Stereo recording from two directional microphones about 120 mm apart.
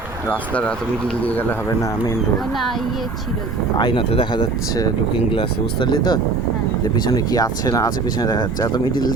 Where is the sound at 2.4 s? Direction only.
Centre (ahead or behind).